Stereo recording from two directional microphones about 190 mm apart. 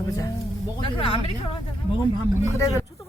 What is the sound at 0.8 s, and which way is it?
Speech, 30° left (ahead or behind).